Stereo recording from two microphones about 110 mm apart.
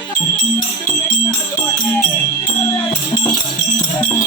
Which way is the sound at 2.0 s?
15° left (ahead or behind).